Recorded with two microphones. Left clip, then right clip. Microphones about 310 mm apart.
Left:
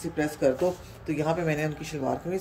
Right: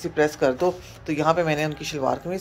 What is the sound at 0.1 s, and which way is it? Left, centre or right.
Speech, centre.